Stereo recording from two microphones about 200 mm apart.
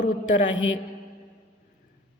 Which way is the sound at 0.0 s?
40° left (ahead or behind).